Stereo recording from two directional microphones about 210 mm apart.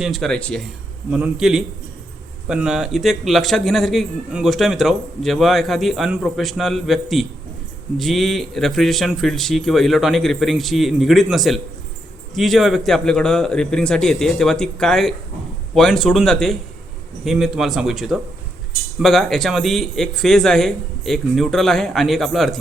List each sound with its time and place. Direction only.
0.0 s a man's voice: centre (ahead or behind)